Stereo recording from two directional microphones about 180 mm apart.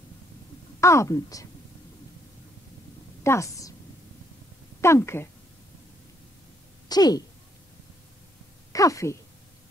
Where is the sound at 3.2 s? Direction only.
15° left (ahead or behind).